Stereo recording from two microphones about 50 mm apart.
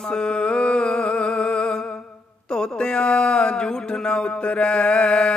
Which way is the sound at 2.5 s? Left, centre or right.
Centre.